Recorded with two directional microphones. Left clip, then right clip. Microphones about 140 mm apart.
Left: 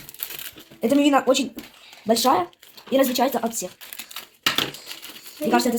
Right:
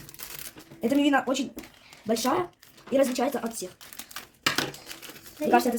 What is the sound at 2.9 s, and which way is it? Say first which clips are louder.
Speech: left 4 dB; 90° left.